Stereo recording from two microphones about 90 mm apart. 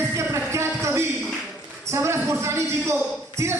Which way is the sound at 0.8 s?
30° right (ahead or behind).